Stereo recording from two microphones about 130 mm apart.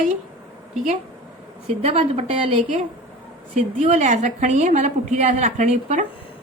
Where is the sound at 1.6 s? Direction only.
55° right (ahead or behind).